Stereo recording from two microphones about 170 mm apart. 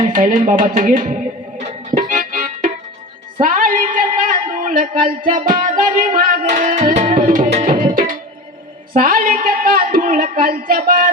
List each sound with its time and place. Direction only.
0.1 s speech: 50° right (ahead or behind)
1.5 s music: 45° right (ahead or behind)
3.4 s speech: 50° right (ahead or behind)
9.0 s a sound: 55° right (ahead or behind)